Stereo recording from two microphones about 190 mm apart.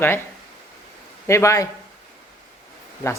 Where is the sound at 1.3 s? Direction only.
15° left (ahead or behind).